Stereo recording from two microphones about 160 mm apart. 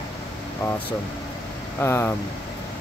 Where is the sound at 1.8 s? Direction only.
15° left (ahead or behind).